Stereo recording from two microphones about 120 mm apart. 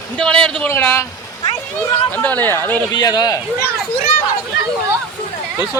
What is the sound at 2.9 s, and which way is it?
Speech, 35° left (ahead or behind).